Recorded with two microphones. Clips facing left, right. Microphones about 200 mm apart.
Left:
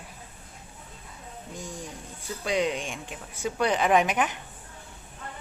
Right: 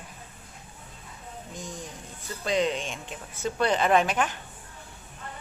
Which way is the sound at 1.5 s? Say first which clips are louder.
Left 1 dB; 10° left (ahead or behind).